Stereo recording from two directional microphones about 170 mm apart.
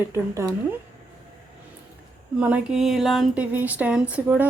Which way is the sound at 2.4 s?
5° right (ahead or behind).